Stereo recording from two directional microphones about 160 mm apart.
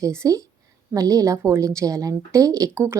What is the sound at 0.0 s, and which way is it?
A woman's voice, 20° right (ahead or behind).